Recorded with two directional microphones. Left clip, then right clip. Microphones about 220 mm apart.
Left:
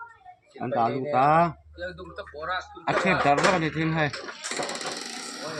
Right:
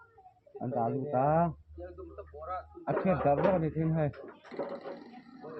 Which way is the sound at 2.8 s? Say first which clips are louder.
Left 6 dB; 5° left (ahead or behind).